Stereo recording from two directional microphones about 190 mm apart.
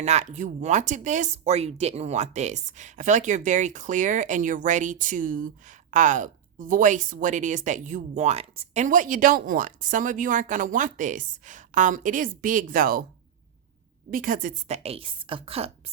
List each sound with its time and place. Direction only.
0.0 s speech: 35° right (ahead or behind)
14.1 s speech: 45° right (ahead or behind)